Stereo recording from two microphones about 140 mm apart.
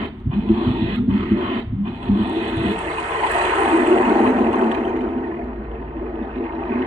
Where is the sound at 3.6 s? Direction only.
45° right (ahead or behind).